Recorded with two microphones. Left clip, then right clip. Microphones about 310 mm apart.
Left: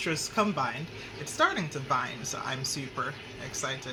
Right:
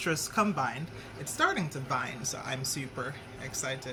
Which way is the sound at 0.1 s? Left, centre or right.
Centre.